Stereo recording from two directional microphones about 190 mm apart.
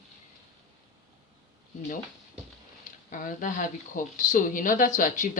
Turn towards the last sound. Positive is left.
turn(degrees=40)  # may be behind; listen again after turning